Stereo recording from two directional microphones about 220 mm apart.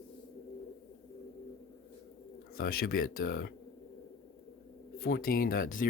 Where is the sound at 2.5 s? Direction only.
45° left (ahead or behind).